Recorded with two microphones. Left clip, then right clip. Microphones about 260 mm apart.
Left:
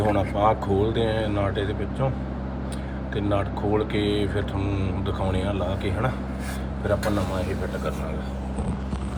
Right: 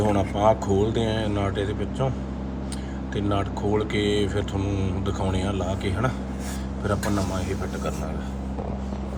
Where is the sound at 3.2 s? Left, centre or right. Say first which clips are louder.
Left 1 dB; right.